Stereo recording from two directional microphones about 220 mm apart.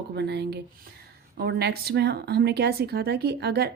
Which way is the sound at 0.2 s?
50° right (ahead or behind).